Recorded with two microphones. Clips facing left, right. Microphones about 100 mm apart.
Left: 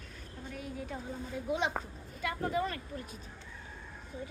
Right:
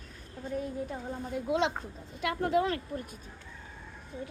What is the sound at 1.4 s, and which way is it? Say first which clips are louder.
A woman's voice: right 4 dB; 90° right.